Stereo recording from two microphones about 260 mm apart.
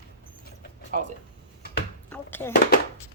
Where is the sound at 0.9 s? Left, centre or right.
Right.